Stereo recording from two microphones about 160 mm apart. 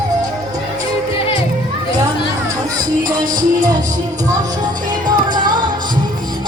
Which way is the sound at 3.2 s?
55° right (ahead or behind).